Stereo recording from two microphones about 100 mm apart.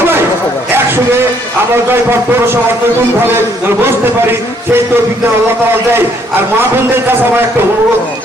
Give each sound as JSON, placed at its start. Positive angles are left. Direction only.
{"t": 3.8, "sound": "a man's voice", "side_deg": -25}